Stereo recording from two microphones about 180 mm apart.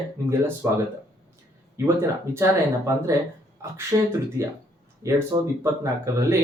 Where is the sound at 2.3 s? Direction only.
15° right (ahead or behind).